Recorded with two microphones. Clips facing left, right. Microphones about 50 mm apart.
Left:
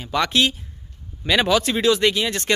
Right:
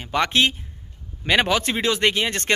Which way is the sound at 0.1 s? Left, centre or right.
Right.